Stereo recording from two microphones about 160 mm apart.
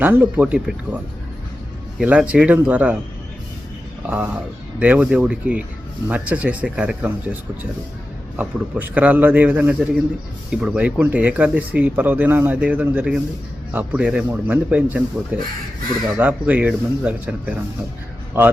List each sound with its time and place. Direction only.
0.0 s speech: 10° right (ahead or behind)
2.0 s speech: 5° right (ahead or behind)
4.0 s speech: 5° right (ahead or behind)